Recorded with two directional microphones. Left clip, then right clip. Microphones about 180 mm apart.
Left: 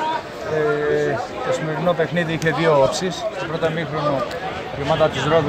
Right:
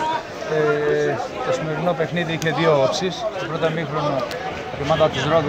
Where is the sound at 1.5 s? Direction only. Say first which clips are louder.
Left 2 dB; centre (ahead or behind).